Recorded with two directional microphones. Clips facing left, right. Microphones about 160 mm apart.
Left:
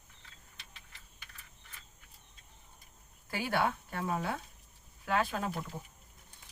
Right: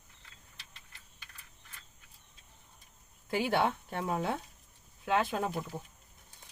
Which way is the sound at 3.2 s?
25° right (ahead or behind).